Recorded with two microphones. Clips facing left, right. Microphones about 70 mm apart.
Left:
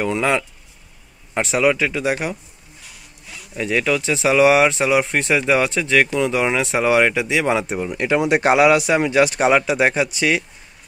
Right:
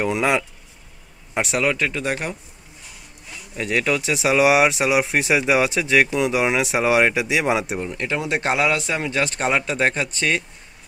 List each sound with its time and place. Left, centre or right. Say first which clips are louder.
0.0 s speech: left 1 dB; centre
1.7 s speech: left 4 dB; centre
3.5 s speech: left 2 dB; centre
8.0 s speech: left 8 dB; left